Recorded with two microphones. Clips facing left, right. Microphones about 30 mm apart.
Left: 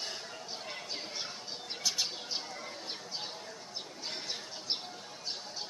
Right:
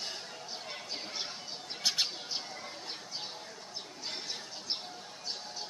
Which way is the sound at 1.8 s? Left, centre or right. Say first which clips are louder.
Right 3 dB; right.